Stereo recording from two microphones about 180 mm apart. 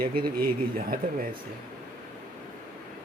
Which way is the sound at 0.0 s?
55° right (ahead or behind).